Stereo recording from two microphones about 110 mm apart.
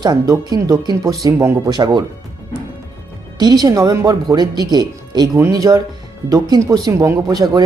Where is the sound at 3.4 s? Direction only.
40° right (ahead or behind).